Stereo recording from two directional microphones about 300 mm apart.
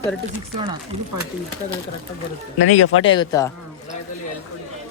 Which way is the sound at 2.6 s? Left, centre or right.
Left.